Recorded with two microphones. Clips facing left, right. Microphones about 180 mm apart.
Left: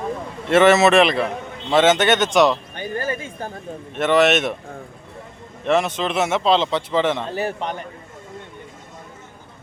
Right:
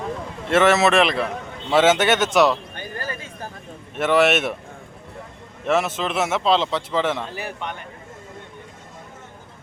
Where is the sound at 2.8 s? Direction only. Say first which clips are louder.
Left 6 dB; 20° left (ahead or behind).